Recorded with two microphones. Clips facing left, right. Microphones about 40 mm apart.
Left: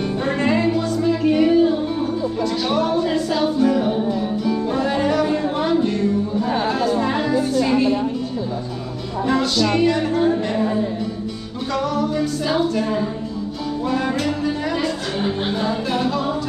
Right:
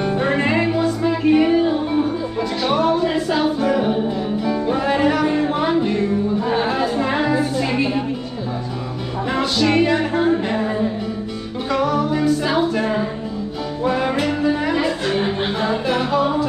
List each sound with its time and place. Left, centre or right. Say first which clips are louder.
0.0 s music: right 2 dB; centre
3.5 s a capella: left 1 dB; right
4.5 s music: right 2 dB; centre
9.3 s music: right 1 dB; right